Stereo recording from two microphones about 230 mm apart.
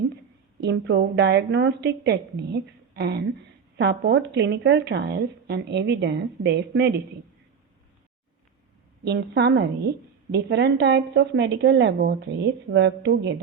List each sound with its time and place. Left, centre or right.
0.6 s speech: right
9.0 s speech: right